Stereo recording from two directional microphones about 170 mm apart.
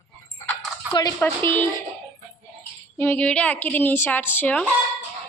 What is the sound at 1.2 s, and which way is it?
Speech, 10° left (ahead or behind).